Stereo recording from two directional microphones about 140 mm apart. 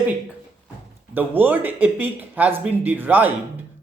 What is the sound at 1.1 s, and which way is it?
Speech, 15° right (ahead or behind).